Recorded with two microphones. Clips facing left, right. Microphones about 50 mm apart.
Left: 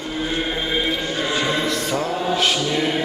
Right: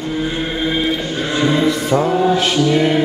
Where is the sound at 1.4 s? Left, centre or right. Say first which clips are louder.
Right 9 dB; centre.